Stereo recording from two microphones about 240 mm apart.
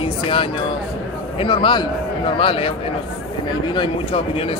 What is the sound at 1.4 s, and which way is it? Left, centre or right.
Speech, left.